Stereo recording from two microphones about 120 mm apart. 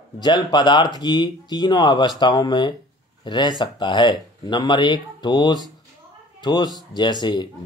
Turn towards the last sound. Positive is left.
turn(degrees=40)  # may be behind; listen again after turning